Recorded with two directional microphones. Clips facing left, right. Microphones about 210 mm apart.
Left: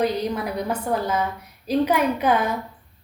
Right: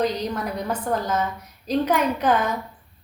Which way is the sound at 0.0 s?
10° left (ahead or behind).